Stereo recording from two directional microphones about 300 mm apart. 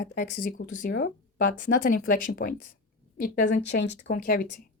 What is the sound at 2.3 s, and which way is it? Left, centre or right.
A woman's voice, left.